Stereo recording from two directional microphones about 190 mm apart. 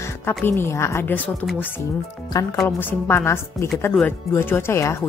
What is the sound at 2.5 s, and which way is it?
Speech, 10° left (ahead or behind).